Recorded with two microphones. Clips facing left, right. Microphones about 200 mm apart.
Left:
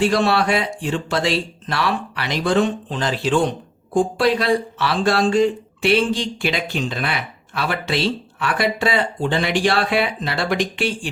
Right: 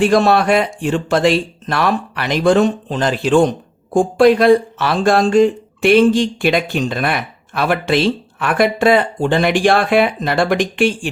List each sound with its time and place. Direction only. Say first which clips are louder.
0.0 s speech: right 5 dB; 45° right (ahead or behind)